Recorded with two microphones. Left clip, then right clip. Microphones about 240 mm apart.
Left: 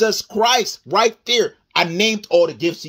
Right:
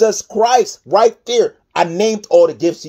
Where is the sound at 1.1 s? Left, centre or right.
Left.